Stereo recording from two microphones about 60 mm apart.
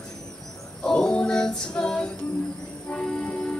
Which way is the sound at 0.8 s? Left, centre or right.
Centre.